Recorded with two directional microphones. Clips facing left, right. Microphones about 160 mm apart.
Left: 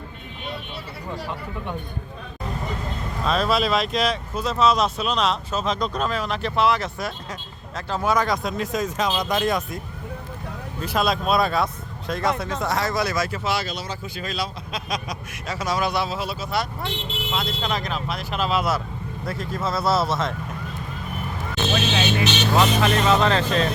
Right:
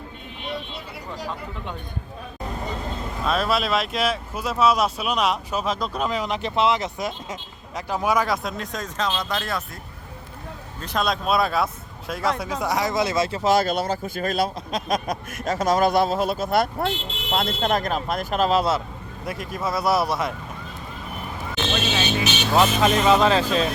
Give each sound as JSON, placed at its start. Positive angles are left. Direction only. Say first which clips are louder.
{"t": 3.2, "sound": "speech", "louder": "left 1 dB", "side_deg": -5}
{"t": 10.8, "sound": "speech", "louder": "left 2 dB", "side_deg": 5}
{"t": 13.4, "sound": "speech", "louder": "right 7 dB", "side_deg": -45}
{"t": 19.2, "sound": "speech", "louder": "even", "side_deg": -15}
{"t": 21.7, "sound": "speech", "louder": "left 2 dB", "side_deg": 0}
{"t": 22.2, "sound": "speech", "louder": "right 2 dB", "side_deg": -10}